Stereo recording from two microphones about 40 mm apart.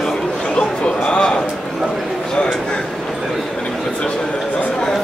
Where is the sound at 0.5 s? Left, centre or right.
Left.